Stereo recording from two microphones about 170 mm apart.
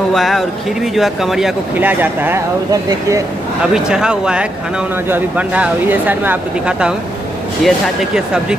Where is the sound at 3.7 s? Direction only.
5° right (ahead or behind).